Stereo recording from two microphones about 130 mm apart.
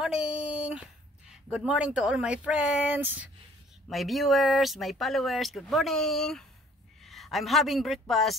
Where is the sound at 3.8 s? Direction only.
Centre (ahead or behind).